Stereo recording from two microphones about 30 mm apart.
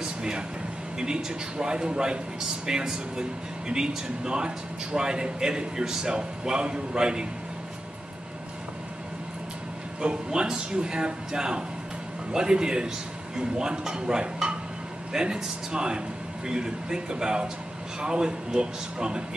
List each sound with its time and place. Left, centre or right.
0.0 s air conditioning: right
0.9 s speech: right
10.0 s speech: right